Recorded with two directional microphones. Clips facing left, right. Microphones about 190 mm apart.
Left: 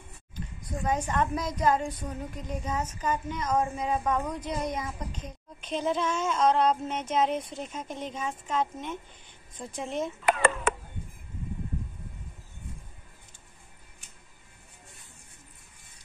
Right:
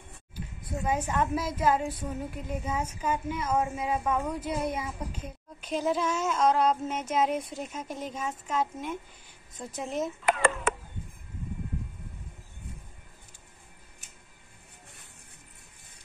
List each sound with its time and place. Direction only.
0.6 s a woman's voice: 5° right (ahead or behind)
10.2 s a child's voice: 60° left (ahead or behind)